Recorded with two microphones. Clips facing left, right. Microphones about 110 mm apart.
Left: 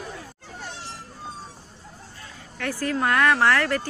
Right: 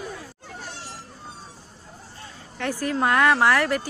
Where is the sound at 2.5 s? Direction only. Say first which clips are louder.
Right 1 dB; 20° right (ahead or behind).